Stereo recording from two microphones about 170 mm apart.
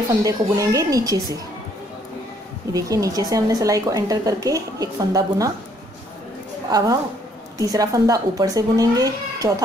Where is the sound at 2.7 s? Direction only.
20° right (ahead or behind).